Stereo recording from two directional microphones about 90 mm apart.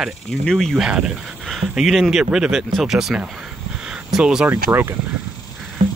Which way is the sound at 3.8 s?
10° right (ahead or behind).